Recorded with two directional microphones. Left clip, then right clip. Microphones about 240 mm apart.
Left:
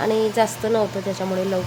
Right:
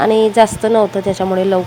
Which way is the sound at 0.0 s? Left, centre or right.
Right.